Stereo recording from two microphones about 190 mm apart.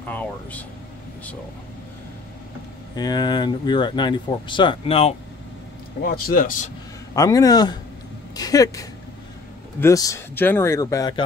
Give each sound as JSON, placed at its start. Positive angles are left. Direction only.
{"t": 0.0, "sound": "speech", "side_deg": 10}
{"t": 3.0, "sound": "speech", "side_deg": 20}
{"t": 6.0, "sound": "speech", "side_deg": 50}
{"t": 7.2, "sound": "speech", "side_deg": 20}